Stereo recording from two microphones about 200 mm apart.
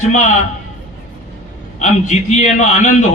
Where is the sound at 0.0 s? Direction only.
35° left (ahead or behind).